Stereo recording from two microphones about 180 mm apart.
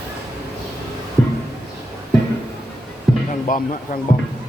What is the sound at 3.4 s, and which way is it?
Speech, 45° left (ahead or behind).